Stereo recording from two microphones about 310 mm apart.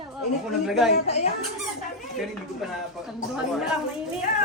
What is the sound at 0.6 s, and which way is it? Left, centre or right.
Speech, centre.